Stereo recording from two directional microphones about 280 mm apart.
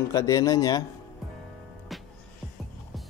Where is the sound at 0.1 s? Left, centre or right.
Centre.